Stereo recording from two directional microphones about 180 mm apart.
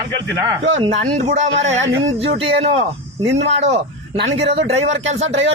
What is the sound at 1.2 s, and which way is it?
Speech, 40° right (ahead or behind).